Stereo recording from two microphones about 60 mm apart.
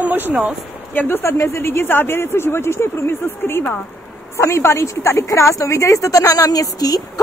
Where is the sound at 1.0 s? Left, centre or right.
Left.